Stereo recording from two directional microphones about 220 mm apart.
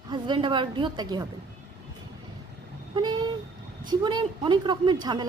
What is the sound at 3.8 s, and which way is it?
A woman's voice, 20° right (ahead or behind).